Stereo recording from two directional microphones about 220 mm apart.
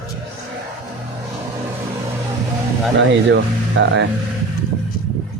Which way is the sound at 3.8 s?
55° right (ahead or behind).